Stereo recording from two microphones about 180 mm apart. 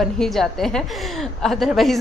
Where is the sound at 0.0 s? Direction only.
Centre (ahead or behind).